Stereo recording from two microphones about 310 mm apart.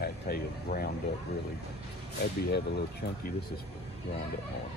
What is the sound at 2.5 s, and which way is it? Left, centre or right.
Speech, left.